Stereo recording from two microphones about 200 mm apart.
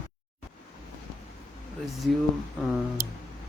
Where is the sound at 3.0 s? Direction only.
50° right (ahead or behind).